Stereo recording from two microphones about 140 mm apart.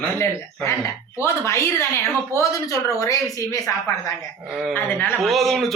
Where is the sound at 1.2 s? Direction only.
20° left (ahead or behind).